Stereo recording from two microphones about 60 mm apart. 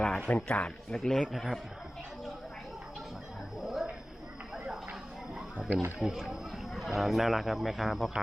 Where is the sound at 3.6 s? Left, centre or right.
Centre.